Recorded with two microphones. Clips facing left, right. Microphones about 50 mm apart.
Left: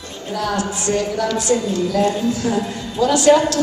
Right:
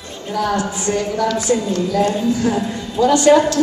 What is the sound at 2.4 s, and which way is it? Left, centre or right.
A man's voice, centre.